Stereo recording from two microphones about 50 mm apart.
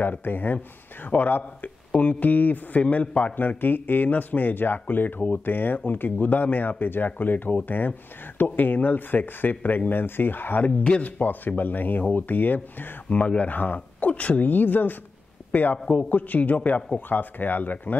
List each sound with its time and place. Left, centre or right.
0.0 s speech: left
3.3 s speech: left
10.8 s speech: left